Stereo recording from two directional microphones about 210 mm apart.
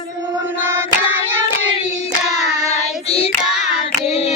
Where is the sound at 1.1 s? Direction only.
10° right (ahead or behind).